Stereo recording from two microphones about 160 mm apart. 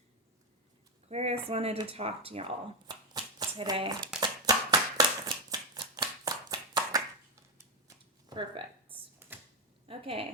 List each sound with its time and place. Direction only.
1.0 s speech: 40° right (ahead or behind)
2.8 s shuffling cards: 25° right (ahead or behind)
4.2 s a sound: 25° right (ahead or behind)
9.8 s a woman's voice: 35° right (ahead or behind)